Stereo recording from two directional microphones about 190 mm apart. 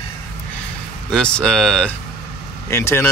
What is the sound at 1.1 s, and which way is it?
Speech, 5° left (ahead or behind).